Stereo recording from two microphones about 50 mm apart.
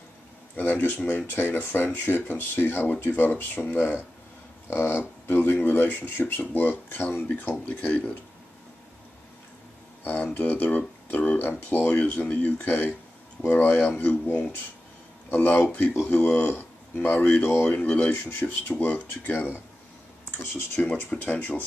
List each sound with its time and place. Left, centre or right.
0.6 s speech: left
7.3 s speech: left
10.0 s speech: left
17.4 s speech: left
17.6 s speech: left
20.5 s speech: left